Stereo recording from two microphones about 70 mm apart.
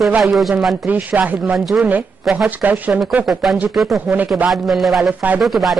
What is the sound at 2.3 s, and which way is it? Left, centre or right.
Speech, right.